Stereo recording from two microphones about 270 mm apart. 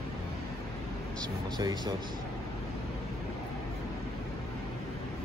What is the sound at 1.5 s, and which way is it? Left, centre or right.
Speech, centre.